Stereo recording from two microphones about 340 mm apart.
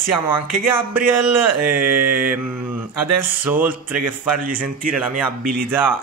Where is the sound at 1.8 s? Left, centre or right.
Right.